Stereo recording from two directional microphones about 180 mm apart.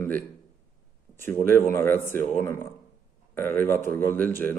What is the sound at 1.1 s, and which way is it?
Speech, 10° left (ahead or behind).